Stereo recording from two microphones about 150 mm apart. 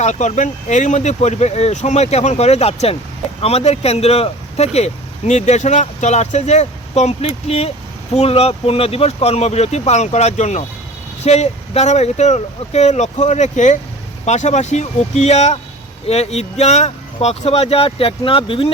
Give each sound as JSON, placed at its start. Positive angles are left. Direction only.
{"t": 0.0, "sound": "speech", "side_deg": 50}